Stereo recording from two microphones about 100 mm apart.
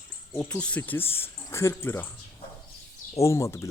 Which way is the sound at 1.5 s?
30° left (ahead or behind).